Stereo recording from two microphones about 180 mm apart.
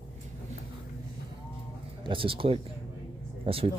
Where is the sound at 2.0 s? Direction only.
30° right (ahead or behind).